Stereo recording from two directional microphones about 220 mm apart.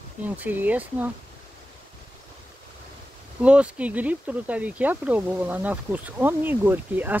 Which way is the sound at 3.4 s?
5° right (ahead or behind).